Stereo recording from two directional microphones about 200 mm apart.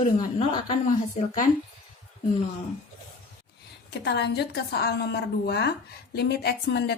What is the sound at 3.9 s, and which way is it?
A woman's voice, 55° left (ahead or behind).